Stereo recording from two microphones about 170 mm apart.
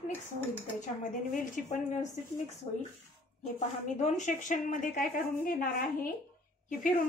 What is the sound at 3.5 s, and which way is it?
A woman's voice, 45° left (ahead or behind).